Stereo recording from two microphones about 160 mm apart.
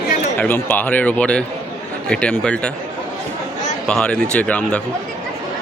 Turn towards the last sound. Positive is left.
turn(degrees=10)  # may be behind; listen again after turning